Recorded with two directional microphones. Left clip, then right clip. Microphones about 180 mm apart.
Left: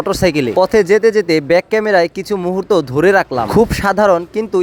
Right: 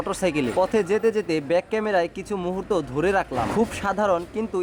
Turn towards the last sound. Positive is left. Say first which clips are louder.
# left 10 dB
turn(degrees=35)  # may be behind; listen again after turning